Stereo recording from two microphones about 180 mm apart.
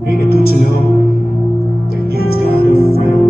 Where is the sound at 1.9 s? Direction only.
60° left (ahead or behind).